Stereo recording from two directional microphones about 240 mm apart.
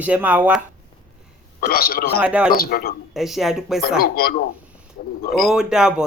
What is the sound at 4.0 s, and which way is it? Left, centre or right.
Speech, left.